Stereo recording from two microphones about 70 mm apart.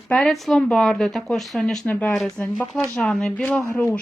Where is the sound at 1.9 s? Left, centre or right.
Left.